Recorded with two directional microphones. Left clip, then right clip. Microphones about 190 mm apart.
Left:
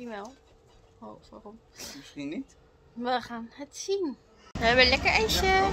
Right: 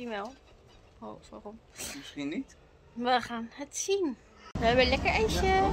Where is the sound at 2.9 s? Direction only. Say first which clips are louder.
Right 2 dB; 20° right (ahead or behind).